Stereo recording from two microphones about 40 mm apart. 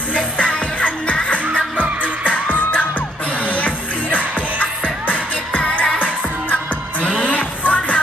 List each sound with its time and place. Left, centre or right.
0.1 s music: left